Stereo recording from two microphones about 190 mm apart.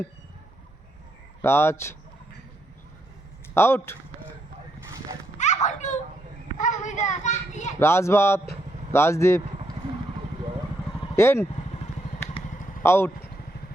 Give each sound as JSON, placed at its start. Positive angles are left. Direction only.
{"t": 1.4, "sound": "speech", "side_deg": 10}
{"t": 3.5, "sound": "speech", "side_deg": 15}
{"t": 5.6, "sound": "a sound", "side_deg": 40}
{"t": 6.6, "sound": "children playing", "side_deg": 40}
{"t": 7.8, "sound": "speech", "side_deg": 15}
{"t": 11.2, "sound": "speech", "side_deg": 15}
{"t": 12.8, "sound": "speech", "side_deg": 15}